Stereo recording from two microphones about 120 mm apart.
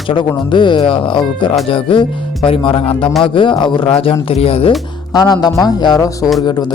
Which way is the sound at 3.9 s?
55° left (ahead or behind).